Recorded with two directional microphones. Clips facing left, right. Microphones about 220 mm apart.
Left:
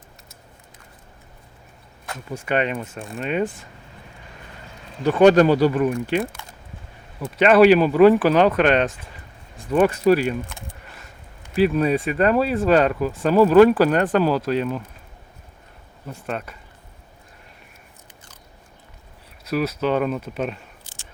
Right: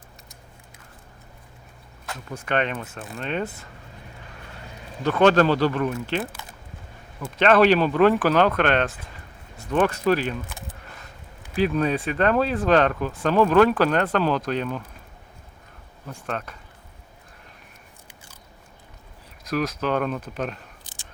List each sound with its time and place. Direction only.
2.3 s speech: 10° left (ahead or behind)
3.0 s speech: centre (ahead or behind)
5.0 s speech: 10° left (ahead or behind)
7.3 s speech: 10° left (ahead or behind)
11.5 s speech: 5° left (ahead or behind)
16.2 s speech: 5° left (ahead or behind)
19.5 s speech: 10° left (ahead or behind)
20.8 s whispering: 15° right (ahead or behind)